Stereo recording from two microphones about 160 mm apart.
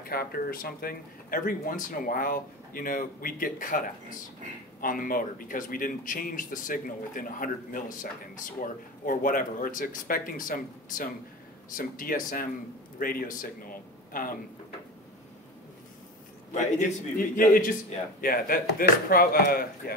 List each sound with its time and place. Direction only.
0.0 s speech: 70° left (ahead or behind)
16.5 s speech: 55° left (ahead or behind)